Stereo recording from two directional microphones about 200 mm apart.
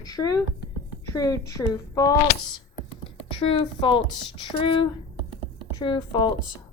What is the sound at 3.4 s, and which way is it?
A woman's voice, 25° left (ahead or behind).